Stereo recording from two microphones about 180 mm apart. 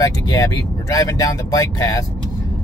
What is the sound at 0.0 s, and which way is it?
Speech, 20° left (ahead or behind).